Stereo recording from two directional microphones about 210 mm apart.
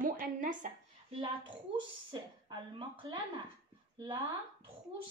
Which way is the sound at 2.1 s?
20° right (ahead or behind).